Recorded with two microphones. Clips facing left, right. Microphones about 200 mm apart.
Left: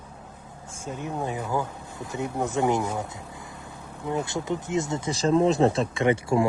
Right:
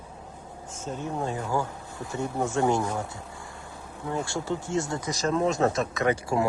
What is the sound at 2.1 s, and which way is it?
Speech, 15° left (ahead or behind).